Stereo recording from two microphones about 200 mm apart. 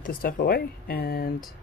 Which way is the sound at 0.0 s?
45° left (ahead or behind).